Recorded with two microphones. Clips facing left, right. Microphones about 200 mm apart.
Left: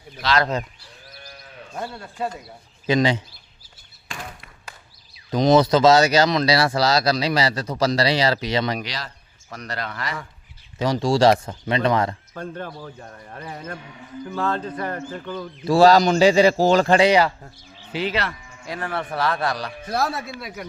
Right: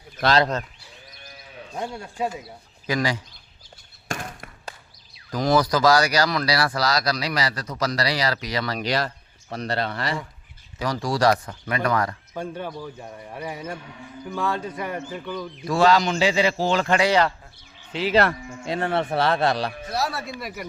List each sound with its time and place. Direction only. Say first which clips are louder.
0.2 s speech: right 2 dB; 55° right (ahead or behind)
1.2 s sheep: left 3 dB; centre (ahead or behind)
1.7 s a man's voice: right 1 dB; 15° right (ahead or behind)
2.8 s speech: left 5 dB; 25° left (ahead or behind)
4.1 s a sound: right 5 dB; 45° right (ahead or behind)
5.3 s speech: left 5 dB; 20° left (ahead or behind)
8.9 s speech: right 9 dB; 55° right (ahead or behind)
9.5 s speech: right 5 dB; 30° right (ahead or behind)
10.8 s speech: left 5 dB; 25° left (ahead or behind)
12.3 s a man's voice: right 1 dB; 10° right (ahead or behind)
15.6 s speech: left 5 dB; 35° left (ahead or behind)
18.1 s speech: right 7 dB; 50° right (ahead or behind)
18.6 s speech: right 4 dB; 25° right (ahead or behind)
19.9 s speech: left 3 dB; 55° left (ahead or behind)